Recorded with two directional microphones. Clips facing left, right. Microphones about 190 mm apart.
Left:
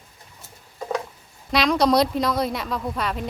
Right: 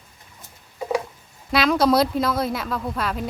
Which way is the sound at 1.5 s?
Centre (ahead or behind).